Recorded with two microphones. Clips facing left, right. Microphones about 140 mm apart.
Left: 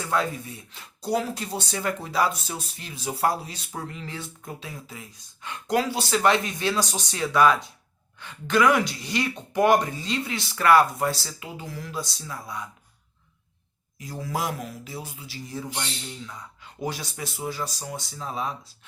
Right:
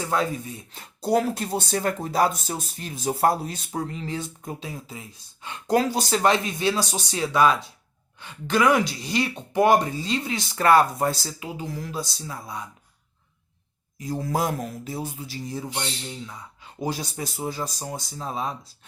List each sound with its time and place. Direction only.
0.0 s speech: 25° right (ahead or behind)
0.8 s speech: 50° right (ahead or behind)
3.7 s speech: 30° right (ahead or behind)
6.1 s speech: 25° right (ahead or behind)
14.0 s speech: 35° right (ahead or behind)
16.8 s speech: 35° right (ahead or behind)